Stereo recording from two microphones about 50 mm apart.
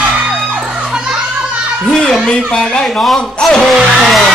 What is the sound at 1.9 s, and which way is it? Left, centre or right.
Children playing, centre.